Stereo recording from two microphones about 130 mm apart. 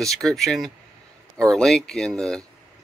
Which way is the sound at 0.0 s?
5° left (ahead or behind).